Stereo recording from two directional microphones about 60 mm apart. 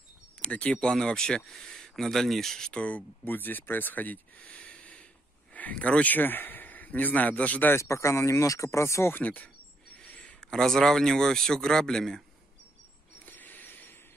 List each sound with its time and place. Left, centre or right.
0.4 s speech: left
2.7 s speech: left
7.7 s speech: left
9.1 s speech: left
9.9 s a sound: left
10.5 s speech: centre
13.2 s a sound: left